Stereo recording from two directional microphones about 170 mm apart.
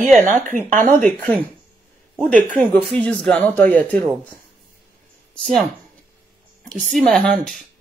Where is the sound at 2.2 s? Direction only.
5° left (ahead or behind).